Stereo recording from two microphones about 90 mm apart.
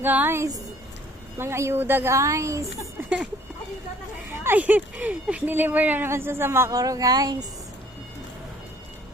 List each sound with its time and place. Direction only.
0.0 s a woman's voice: 20° right (ahead or behind)
4.4 s speech: 20° right (ahead or behind)
6.7 s speech: 40° right (ahead or behind)